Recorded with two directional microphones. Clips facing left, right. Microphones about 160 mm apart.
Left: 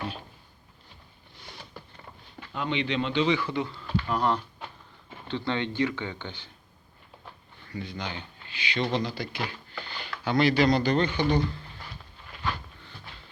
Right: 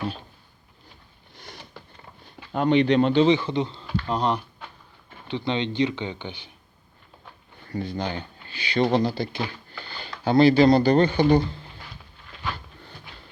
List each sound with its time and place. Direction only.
2.5 s speech: 45° right (ahead or behind)
3.2 s speech: 25° right (ahead or behind)
7.7 s speech: 40° right (ahead or behind)